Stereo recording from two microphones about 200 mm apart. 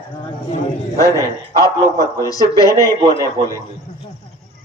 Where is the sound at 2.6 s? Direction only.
15° right (ahead or behind).